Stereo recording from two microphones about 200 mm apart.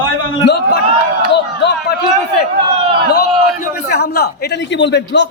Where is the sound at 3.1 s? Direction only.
55° left (ahead or behind).